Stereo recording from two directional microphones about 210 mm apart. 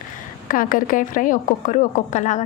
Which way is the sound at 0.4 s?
40° left (ahead or behind).